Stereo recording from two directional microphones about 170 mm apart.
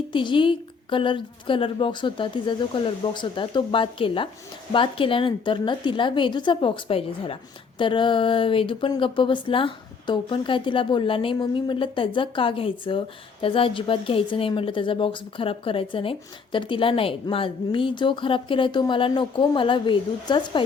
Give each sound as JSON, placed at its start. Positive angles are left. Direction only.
{"t": 0.1, "sound": "speech", "side_deg": 30}